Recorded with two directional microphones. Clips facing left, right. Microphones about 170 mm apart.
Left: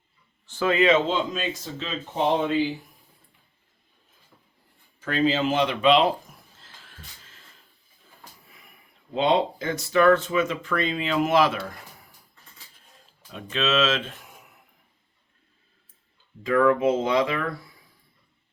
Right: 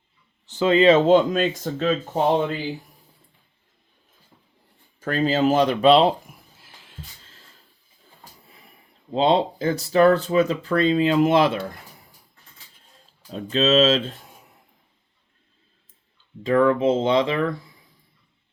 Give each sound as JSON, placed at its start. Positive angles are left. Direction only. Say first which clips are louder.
{"t": 0.4, "sound": "speech", "louder": "right 5 dB", "side_deg": -20}
{"t": 1.0, "sound": "speech", "louder": "right 10 dB", "side_deg": -50}
{"t": 4.9, "sound": "speech", "louder": "right 2 dB", "side_deg": -45}
{"t": 6.2, "sound": "a sound", "louder": "right 2 dB", "side_deg": -10}
{"t": 8.4, "sound": "a sound", "louder": "right 3 dB", "side_deg": -30}
{"t": 9.1, "sound": "speech", "louder": "right 3 dB", "side_deg": -30}
{"t": 13.3, "sound": "speech", "louder": "right 6 dB", "side_deg": -35}
{"t": 16.4, "sound": "speech", "louder": "right 2 dB", "side_deg": -30}